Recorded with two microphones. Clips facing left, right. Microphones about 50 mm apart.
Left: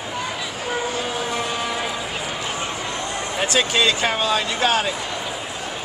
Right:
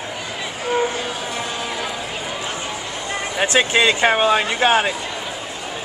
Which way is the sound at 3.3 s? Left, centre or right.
Right.